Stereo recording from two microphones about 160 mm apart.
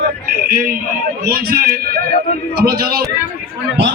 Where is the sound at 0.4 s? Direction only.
65° right (ahead or behind).